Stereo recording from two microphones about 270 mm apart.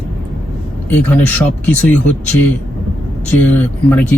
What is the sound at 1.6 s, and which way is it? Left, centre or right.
Speech, centre.